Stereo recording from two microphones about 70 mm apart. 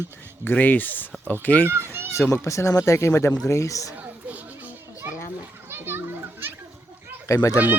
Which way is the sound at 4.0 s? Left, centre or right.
Right.